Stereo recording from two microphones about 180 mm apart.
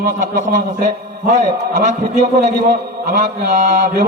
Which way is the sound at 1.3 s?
40° right (ahead or behind).